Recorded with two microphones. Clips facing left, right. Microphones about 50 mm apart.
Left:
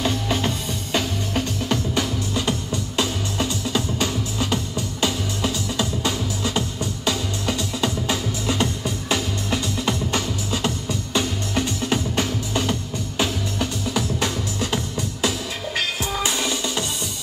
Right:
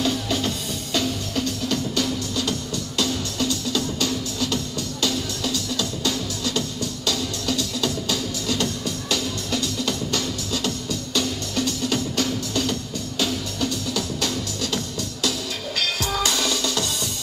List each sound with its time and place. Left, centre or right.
0.0 s music: left